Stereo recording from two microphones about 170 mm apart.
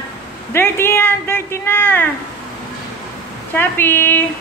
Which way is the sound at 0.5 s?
15° left (ahead or behind).